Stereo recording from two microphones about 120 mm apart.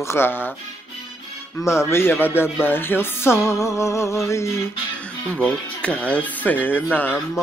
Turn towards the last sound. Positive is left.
turn(degrees=15)  # may be behind; listen again after turning